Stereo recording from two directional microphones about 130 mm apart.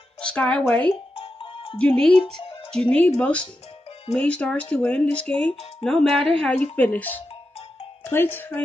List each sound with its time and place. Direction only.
0.2 s speech: 10° left (ahead or behind)
1.1 s music: 45° left (ahead or behind)
1.8 s speech: 5° left (ahead or behind)